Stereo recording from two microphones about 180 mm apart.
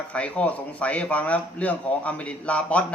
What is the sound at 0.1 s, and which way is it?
Speech, 5° left (ahead or behind).